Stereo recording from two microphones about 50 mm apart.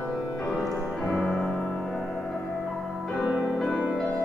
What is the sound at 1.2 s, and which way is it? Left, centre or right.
Music, centre.